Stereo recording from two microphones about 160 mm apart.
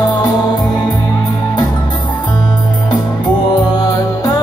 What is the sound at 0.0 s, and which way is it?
Music, 25° left (ahead or behind).